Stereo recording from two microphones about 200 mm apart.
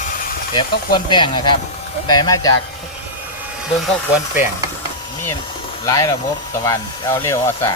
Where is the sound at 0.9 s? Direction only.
25° left (ahead or behind).